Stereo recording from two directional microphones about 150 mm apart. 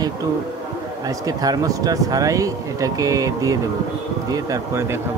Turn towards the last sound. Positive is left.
turn(degrees=-20)  # may be behind; listen again after turning